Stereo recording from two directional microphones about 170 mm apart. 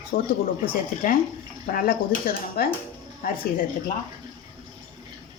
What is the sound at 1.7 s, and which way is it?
Speech, 55° left (ahead or behind).